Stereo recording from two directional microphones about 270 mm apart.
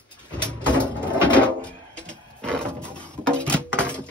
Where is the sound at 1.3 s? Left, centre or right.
Centre.